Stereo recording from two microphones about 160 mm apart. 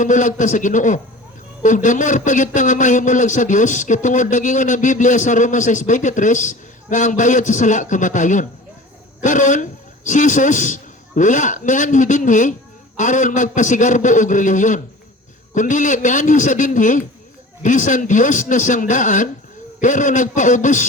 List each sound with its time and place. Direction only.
0.0 s speech: 50° left (ahead or behind)